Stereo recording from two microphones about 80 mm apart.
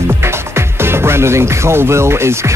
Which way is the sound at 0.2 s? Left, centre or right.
Right.